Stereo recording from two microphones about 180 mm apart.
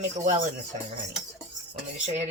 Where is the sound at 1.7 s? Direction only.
40° right (ahead or behind).